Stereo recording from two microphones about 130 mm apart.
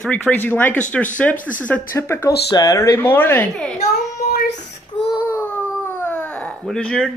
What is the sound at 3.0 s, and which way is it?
Speech, 15° left (ahead or behind).